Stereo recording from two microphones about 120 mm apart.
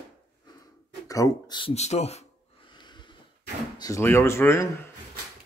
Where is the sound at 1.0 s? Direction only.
30° left (ahead or behind).